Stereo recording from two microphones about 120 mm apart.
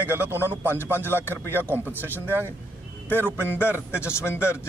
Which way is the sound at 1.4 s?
15° left (ahead or behind).